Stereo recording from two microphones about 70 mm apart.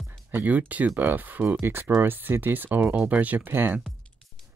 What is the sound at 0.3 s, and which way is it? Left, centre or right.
Speech, right.